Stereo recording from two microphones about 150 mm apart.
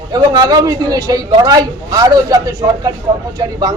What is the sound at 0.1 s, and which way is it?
A man's voice, 25° right (ahead or behind).